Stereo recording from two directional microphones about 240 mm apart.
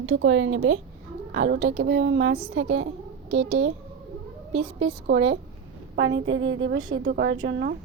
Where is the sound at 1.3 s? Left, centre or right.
Right.